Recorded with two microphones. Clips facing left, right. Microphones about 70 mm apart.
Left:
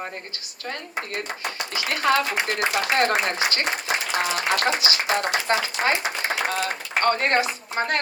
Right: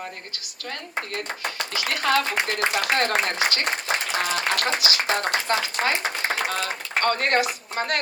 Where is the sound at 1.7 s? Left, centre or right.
Left.